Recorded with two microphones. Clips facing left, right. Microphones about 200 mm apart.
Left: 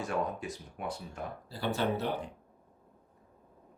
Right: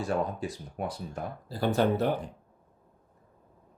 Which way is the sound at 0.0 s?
35° right (ahead or behind).